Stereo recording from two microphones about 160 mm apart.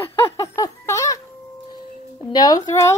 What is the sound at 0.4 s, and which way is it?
Music, 20° left (ahead or behind).